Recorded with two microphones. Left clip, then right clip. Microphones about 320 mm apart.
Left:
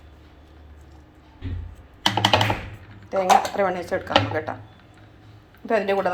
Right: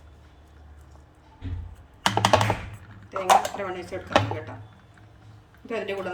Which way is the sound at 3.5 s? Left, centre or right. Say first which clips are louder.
Left 9 dB; left.